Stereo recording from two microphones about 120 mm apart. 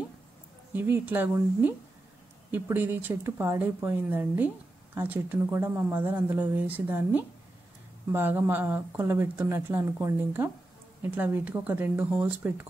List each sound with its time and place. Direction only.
0.7 s speech: 15° right (ahead or behind)